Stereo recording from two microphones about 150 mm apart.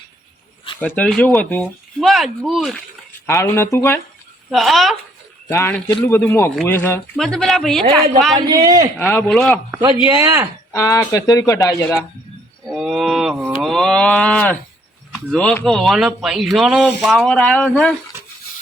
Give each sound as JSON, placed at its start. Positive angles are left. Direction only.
{"t": 0.8, "sound": "speech", "side_deg": 10}
{"t": 2.0, "sound": "speech", "side_deg": 0}
{"t": 3.2, "sound": "speech", "side_deg": 20}
{"t": 4.5, "sound": "speech", "side_deg": 0}
{"t": 5.5, "sound": "speech", "side_deg": 20}
{"t": 5.7, "sound": "speech", "side_deg": 5}
{"t": 7.2, "sound": "speech", "side_deg": 5}
{"t": 8.4, "sound": "a man's voice", "side_deg": -30}
{"t": 9.0, "sound": "speech", "side_deg": 15}
{"t": 9.3, "sound": "speech", "side_deg": 0}
{"t": 10.1, "sound": "a man's voice", "side_deg": -20}
{"t": 10.7, "sound": "speech", "side_deg": 20}
{"t": 12.6, "sound": "speech", "side_deg": -5}